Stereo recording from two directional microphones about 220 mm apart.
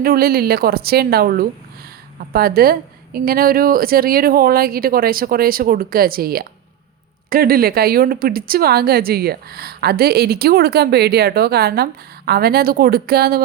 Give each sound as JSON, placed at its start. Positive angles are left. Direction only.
{"t": 0.0, "sound": "a woman's voice", "side_deg": -40}